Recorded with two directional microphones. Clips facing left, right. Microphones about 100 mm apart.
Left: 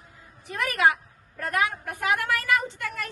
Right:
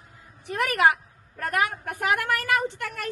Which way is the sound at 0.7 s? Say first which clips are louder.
Right 1 dB; 60° right (ahead or behind).